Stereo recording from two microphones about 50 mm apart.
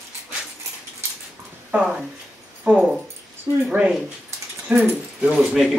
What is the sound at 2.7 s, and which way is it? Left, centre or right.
Speech, right.